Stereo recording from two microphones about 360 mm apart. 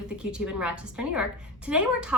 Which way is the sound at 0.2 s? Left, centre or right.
Centre.